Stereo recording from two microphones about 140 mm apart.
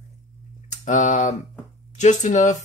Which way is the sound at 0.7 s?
60° left (ahead or behind).